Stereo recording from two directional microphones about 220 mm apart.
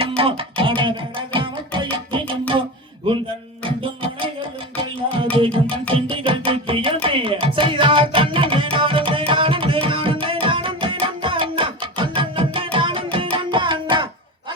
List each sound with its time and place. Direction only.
0.2 s music: 25° right (ahead or behind)
3.6 s music: 25° right (ahead or behind)
9.8 s tabla: 25° right (ahead or behind)
10.4 s music: 25° right (ahead or behind)